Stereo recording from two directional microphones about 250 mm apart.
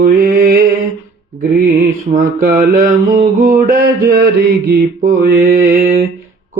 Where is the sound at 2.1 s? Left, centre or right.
Right.